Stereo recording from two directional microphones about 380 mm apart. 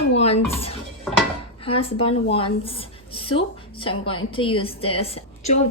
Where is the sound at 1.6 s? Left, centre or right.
Centre.